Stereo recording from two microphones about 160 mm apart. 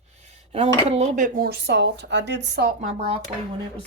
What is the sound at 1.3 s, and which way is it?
Speech, 75° right (ahead or behind).